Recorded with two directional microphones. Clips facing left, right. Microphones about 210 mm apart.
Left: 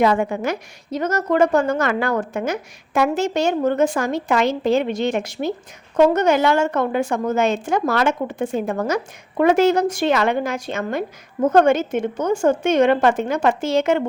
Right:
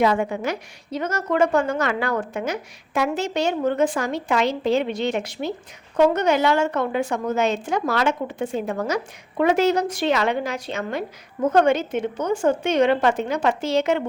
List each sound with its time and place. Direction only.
0.0 s a woman's voice: 50° left (ahead or behind)